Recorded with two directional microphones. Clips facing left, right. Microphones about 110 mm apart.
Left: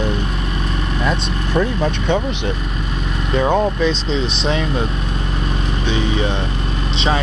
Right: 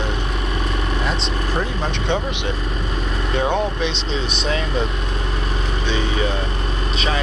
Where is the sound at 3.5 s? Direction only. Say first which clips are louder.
Left 5 dB; 40° left (ahead or behind).